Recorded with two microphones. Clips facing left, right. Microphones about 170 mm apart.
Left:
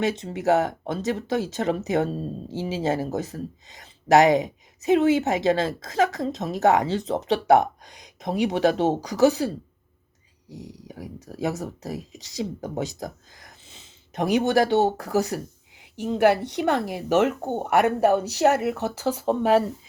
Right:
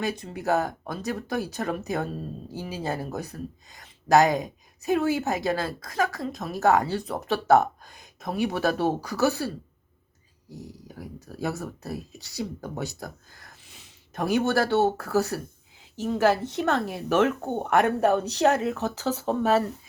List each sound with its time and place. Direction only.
0.0 s a woman's voice: 25° left (ahead or behind)